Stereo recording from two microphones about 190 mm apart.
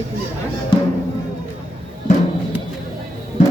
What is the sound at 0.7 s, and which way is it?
Speech, 25° left (ahead or behind).